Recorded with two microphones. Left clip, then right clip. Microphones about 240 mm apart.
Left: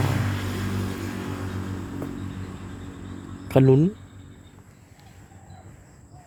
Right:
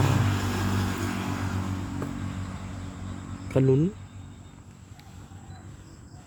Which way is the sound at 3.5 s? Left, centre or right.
Left.